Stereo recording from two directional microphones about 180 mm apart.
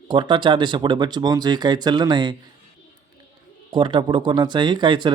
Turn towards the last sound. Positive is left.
turn(degrees=-25)  # may be behind; listen again after turning